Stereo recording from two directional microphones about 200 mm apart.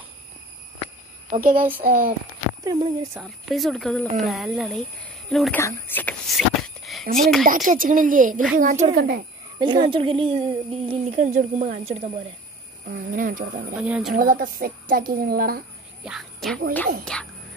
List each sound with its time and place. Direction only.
1.3 s a woman's voice: 45° right (ahead or behind)
2.6 s speech: 15° right (ahead or behind)
3.2 s speech: centre (ahead or behind)
5.6 s a sound: 10° left (ahead or behind)
7.2 s speech: centre (ahead or behind)
7.4 s a woman's voice: 40° right (ahead or behind)
9.6 s speech: 20° right (ahead or behind)
12.8 s a woman's voice: 45° right (ahead or behind)
13.7 s speech: 5° right (ahead or behind)
14.1 s a woman's voice: 45° right (ahead or behind)
16.0 s speech: centre (ahead or behind)